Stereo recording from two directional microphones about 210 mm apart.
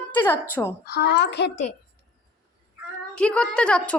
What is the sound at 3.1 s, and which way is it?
Speech, 5° left (ahead or behind).